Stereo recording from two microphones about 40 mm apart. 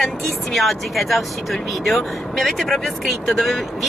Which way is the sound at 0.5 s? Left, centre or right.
Centre.